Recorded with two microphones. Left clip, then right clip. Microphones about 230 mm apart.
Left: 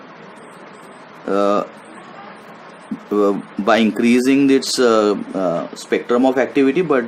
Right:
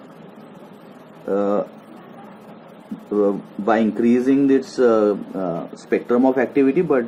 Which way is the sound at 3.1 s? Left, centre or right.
Left.